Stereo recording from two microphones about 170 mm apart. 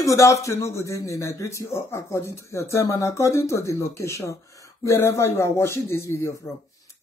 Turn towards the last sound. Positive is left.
turn(degrees=15)  # may be behind; listen again after turning